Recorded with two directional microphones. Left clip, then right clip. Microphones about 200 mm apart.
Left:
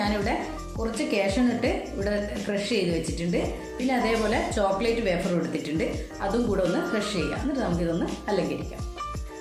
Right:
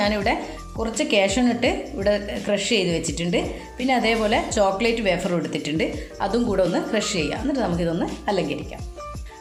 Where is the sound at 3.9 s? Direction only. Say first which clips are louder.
Right 5 dB; 40° right (ahead or behind).